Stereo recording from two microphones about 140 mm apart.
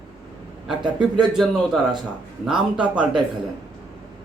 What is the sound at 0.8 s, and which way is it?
Speech, 35° right (ahead or behind).